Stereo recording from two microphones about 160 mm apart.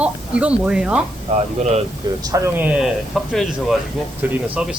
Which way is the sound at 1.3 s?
45° right (ahead or behind).